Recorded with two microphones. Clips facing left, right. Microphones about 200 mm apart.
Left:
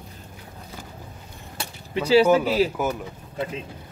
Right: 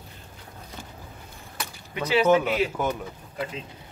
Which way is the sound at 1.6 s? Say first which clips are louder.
Left 4 dB; 30° left (ahead or behind).